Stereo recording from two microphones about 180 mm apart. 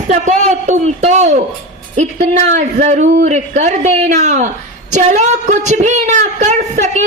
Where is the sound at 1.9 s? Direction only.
40° right (ahead or behind).